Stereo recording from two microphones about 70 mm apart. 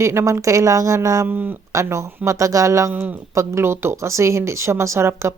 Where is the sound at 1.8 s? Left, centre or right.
Right.